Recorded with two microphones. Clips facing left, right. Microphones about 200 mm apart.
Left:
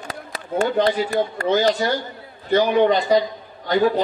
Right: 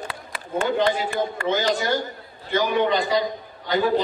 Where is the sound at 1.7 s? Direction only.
45° right (ahead or behind).